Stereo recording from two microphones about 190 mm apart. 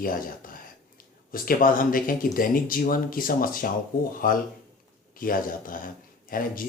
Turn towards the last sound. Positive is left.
turn(degrees=45)  # may be behind; listen again after turning